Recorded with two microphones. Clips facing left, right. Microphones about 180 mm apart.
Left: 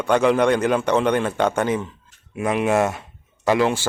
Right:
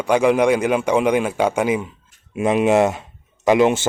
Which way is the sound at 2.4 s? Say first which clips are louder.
Right 4 dB; 20° right (ahead or behind).